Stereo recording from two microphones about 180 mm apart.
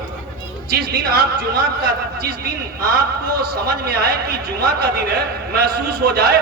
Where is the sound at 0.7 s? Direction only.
60° right (ahead or behind).